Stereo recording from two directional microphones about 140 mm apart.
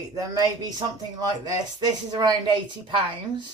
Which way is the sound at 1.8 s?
30° right (ahead or behind).